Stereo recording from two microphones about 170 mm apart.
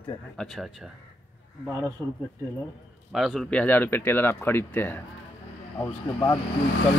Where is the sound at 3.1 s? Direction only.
Centre (ahead or behind).